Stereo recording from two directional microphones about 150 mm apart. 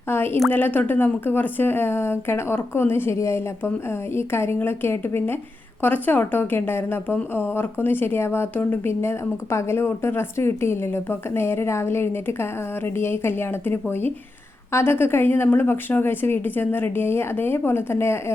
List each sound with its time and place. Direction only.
0.1 s a woman's voice: 15° left (ahead or behind)